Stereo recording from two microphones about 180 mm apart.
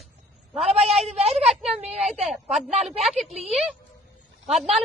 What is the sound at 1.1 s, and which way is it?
Speech, 35° right (ahead or behind).